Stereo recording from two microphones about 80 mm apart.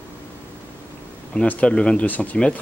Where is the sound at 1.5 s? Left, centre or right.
Centre.